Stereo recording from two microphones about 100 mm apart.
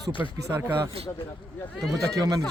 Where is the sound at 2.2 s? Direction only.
35° right (ahead or behind).